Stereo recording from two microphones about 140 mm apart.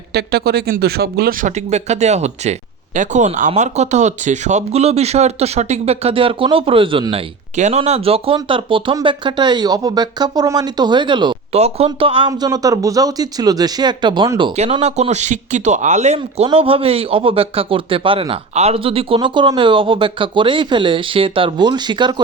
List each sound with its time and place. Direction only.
0.4 s speech: 90° right
1.7 s speech: 55° right (ahead or behind)
7.5 s speech: 55° right (ahead or behind)
7.8 s speech: 45° right (ahead or behind)
11.5 s speech: 50° right (ahead or behind)
12.3 s speech: 25° right (ahead or behind)
14.7 s speech: 50° right (ahead or behind); by 22.1 s 30° right (ahead or behind)